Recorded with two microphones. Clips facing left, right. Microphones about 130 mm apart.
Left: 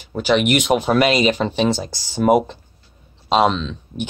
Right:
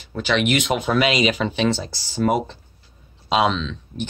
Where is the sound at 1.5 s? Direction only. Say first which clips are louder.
Left 2 dB; 5° left (ahead or behind).